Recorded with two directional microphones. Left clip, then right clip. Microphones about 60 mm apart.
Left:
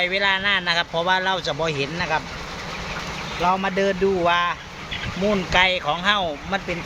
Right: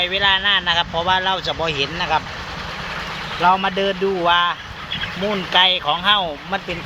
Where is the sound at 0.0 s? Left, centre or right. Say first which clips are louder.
Right 3 dB; left.